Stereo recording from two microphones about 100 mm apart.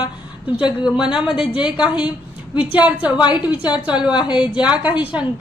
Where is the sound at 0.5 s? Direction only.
10° right (ahead or behind).